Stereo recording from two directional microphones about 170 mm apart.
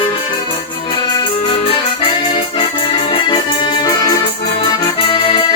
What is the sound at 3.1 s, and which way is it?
Music, 30° left (ahead or behind).